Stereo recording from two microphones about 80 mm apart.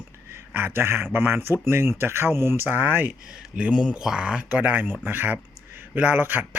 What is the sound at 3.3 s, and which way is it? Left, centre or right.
Speech, centre.